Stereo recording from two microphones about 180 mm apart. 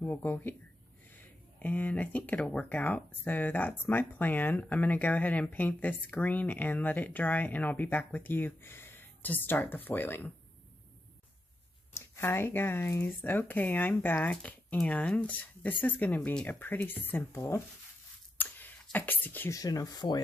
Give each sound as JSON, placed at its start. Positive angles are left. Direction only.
{"t": 0.0, "sound": "speech", "side_deg": 10}
{"t": 11.9, "sound": "speech", "side_deg": 15}